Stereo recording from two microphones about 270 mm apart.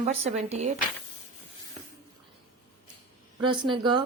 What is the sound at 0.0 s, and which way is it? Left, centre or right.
Speech, right.